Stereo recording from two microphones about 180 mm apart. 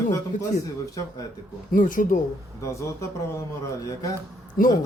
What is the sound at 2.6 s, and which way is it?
Speech, 15° left (ahead or behind).